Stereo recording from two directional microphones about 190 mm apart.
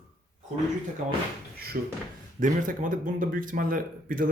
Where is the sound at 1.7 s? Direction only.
45° right (ahead or behind).